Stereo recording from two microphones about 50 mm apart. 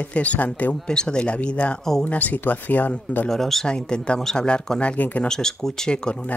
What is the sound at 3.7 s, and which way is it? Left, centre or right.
Speech, centre.